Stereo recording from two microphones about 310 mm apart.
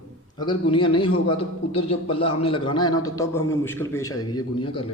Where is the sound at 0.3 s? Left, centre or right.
Centre.